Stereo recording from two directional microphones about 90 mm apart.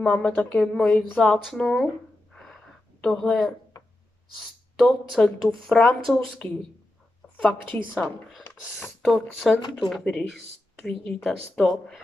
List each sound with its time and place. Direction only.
0.0 s a woman's voice: 10° left (ahead or behind)
3.0 s a woman's voice: 10° left (ahead or behind)
7.4 s a woman's voice: 15° left (ahead or behind)
8.0 s a woman's voice: centre (ahead or behind)